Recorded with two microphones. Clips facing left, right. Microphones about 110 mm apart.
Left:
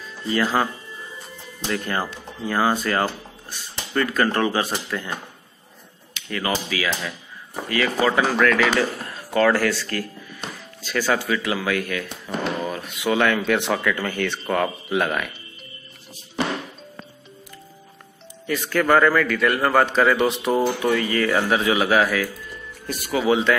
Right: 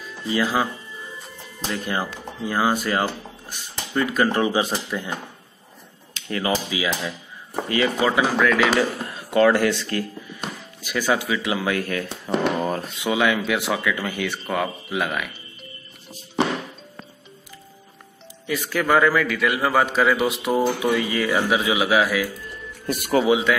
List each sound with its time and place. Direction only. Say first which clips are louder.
0.2 s a man's voice: left 1 dB; 10° right (ahead or behind)
1.7 s a man's voice: left 1 dB; 15° right (ahead or behind)
6.1 s speech: right 2 dB; 30° right (ahead or behind)
8.0 s a man's voice: left 3 dB; 10° right (ahead or behind)
9.0 s speech: right 3 dB; 20° right (ahead or behind); by 13.0 s 40° right (ahead or behind)
13.0 s a man's voice: left 2 dB; 10° right (ahead or behind)
18.5 s a man's voice: left 2 dB; 10° right (ahead or behind)
22.8 s speech: right 4 dB; 55° right (ahead or behind)
23.2 s a man's voice: left 3 dB; 10° right (ahead or behind)